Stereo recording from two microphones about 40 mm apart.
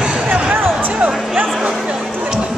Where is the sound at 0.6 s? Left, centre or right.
Right.